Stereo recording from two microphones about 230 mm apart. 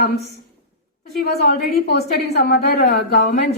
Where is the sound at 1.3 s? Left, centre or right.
Left.